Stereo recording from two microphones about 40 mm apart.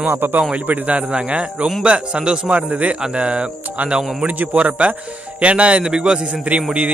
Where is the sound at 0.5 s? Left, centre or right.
Right.